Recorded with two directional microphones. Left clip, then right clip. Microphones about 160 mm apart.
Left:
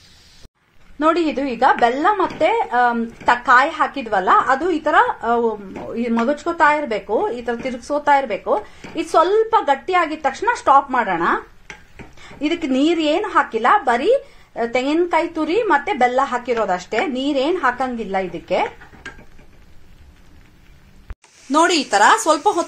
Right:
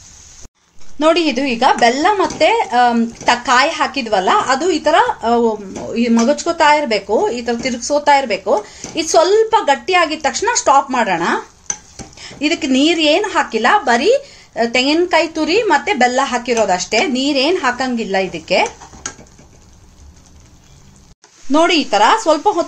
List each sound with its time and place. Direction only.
0.9 s a woman's voice: 5° right (ahead or behind)
12.4 s a woman's voice: 5° right (ahead or behind)
22.0 s speech: 10° left (ahead or behind)